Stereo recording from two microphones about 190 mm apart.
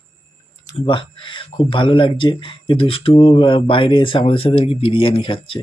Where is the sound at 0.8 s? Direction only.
25° left (ahead or behind).